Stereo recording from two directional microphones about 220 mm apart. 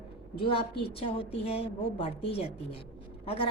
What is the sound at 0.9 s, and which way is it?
A woman's voice, 25° left (ahead or behind).